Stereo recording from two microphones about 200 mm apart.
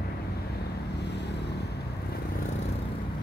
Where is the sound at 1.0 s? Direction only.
55° left (ahead or behind).